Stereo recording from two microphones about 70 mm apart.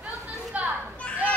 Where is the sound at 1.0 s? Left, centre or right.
Centre.